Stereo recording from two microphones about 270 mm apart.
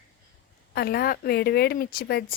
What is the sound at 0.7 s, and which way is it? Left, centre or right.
Speech, left.